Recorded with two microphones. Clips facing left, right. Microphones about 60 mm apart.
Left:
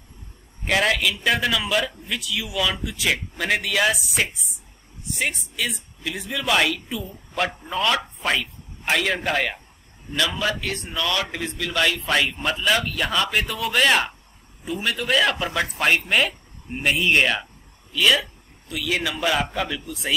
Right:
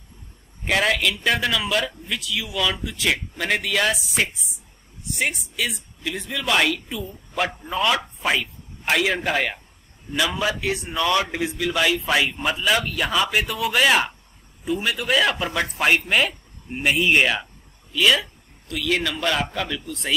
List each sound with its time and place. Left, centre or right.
0.7 s speech: centre
11.4 s a man's voice: centre